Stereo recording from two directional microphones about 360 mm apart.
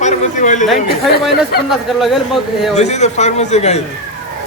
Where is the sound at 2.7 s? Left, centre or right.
Centre.